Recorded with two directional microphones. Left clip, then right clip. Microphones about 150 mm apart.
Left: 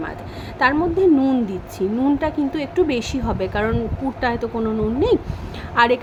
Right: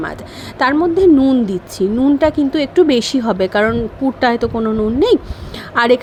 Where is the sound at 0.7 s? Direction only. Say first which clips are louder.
Right 5 dB; 30° right (ahead or behind).